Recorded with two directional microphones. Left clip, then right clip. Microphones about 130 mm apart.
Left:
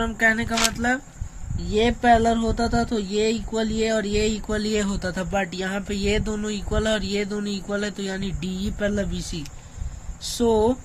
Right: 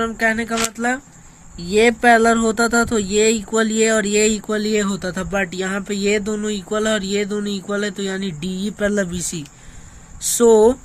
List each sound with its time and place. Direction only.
0.0 s speech: 25° right (ahead or behind)
1.5 s speech: 55° right (ahead or behind)
10.3 s speech: 70° right (ahead or behind)